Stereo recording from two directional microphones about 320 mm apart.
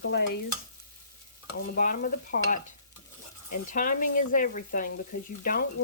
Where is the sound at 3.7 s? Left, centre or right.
Left.